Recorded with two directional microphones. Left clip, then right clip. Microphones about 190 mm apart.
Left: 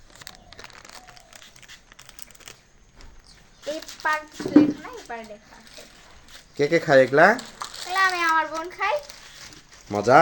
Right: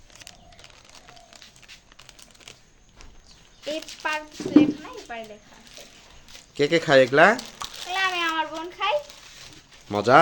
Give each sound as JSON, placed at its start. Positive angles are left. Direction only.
{"t": 2.0, "sound": "typing", "side_deg": 20}
{"t": 3.6, "sound": "speech", "side_deg": -15}
{"t": 6.6, "sound": "speech", "side_deg": 0}
{"t": 7.6, "sound": "bathtub", "side_deg": -5}
{"t": 8.1, "sound": "a child's voice", "side_deg": 0}
{"t": 9.9, "sound": "speech", "side_deg": 0}